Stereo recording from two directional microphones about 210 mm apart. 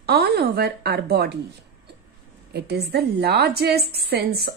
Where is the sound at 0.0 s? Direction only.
50° right (ahead or behind).